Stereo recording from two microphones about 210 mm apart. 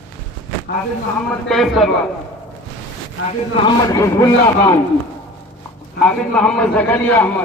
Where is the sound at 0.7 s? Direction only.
45° left (ahead or behind).